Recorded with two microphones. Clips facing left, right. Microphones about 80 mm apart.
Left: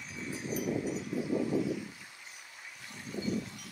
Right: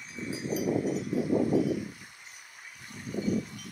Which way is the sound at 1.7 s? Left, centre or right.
Right.